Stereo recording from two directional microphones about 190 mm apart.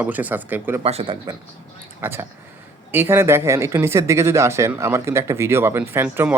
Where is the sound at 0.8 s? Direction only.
30° right (ahead or behind).